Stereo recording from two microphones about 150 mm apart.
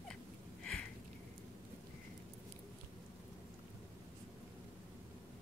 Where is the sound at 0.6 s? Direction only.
5° left (ahead or behind).